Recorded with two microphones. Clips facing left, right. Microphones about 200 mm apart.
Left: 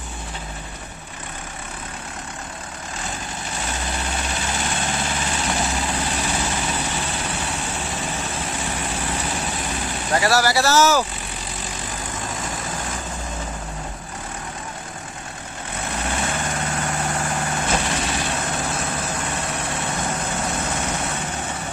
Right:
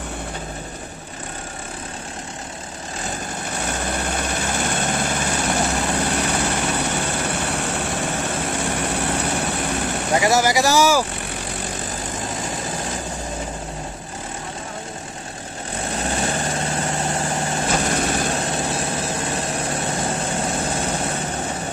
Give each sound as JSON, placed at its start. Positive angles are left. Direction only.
{"t": 3.5, "sound": "vehicle", "side_deg": -55}
{"t": 10.1, "sound": "speech", "side_deg": -20}
{"t": 16.0, "sound": "vehicle", "side_deg": -35}
{"t": 17.8, "sound": "vehicle", "side_deg": -50}
{"t": 18.4, "sound": "vehicle", "side_deg": -30}